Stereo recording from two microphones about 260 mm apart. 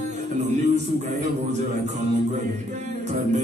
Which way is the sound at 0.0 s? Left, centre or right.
Right.